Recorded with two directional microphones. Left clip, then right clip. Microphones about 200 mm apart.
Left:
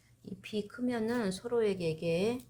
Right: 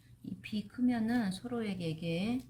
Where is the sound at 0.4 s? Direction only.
40° left (ahead or behind).